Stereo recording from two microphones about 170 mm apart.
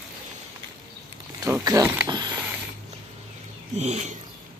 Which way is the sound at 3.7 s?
45° right (ahead or behind).